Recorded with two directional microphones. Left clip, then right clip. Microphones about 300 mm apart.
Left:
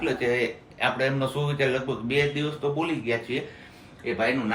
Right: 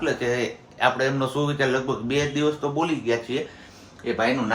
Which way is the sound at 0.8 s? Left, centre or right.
Centre.